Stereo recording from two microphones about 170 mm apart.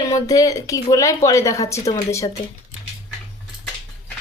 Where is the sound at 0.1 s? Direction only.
20° left (ahead or behind).